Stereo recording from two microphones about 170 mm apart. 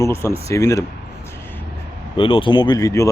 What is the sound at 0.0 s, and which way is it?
Speech, 15° left (ahead or behind).